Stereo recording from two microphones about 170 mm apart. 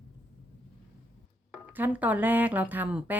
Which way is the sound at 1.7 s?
10° right (ahead or behind).